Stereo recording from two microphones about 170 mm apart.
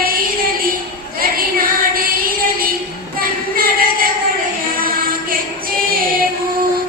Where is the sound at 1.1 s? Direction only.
60° right (ahead or behind).